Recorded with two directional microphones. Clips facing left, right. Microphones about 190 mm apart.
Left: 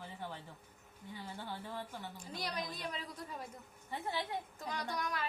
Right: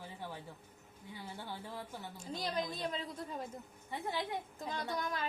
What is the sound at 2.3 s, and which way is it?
Speech, 25° right (ahead or behind).